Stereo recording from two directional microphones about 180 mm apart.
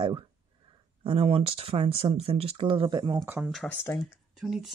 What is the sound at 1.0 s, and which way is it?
Speech, 30° right (ahead or behind).